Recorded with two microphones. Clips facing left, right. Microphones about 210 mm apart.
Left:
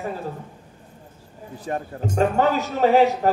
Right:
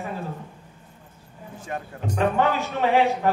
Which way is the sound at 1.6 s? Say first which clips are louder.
Left 4 dB; 35° left (ahead or behind).